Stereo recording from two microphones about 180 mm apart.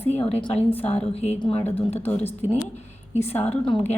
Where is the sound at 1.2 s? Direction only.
30° left (ahead or behind).